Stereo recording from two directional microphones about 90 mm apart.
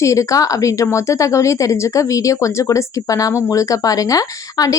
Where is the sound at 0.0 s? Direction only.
35° left (ahead or behind).